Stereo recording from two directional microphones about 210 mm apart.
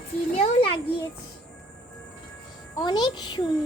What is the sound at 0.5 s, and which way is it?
Speech, 25° left (ahead or behind).